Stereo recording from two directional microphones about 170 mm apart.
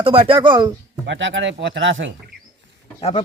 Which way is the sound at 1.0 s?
90° right.